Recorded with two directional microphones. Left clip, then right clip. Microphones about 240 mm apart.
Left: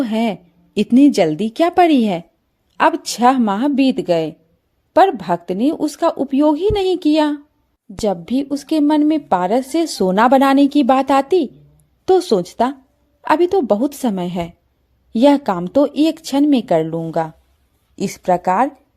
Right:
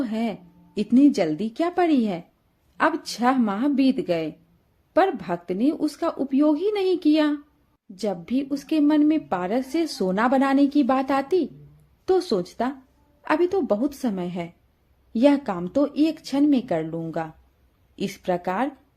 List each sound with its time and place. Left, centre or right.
0.0 s a woman's voice: left